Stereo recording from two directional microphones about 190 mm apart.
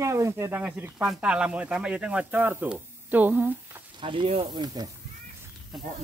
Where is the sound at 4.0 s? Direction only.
25° right (ahead or behind).